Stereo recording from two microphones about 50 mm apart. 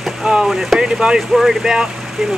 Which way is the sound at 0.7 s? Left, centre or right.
Centre.